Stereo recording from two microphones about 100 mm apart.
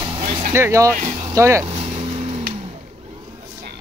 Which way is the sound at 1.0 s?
45° right (ahead or behind).